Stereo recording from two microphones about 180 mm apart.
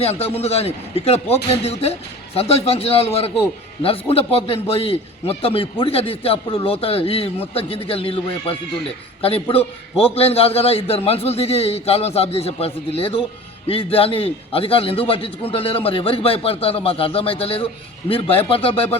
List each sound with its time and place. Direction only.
0.0 s a man's voice: 30° left (ahead or behind)